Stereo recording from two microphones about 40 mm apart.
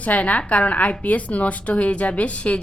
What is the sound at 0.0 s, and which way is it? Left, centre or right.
A woman's voice, left.